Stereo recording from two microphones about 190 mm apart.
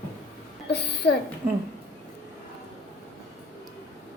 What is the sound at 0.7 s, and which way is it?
Speech, 60° left (ahead or behind).